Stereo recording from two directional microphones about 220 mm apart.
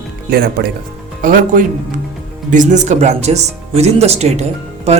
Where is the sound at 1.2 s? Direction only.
40° right (ahead or behind).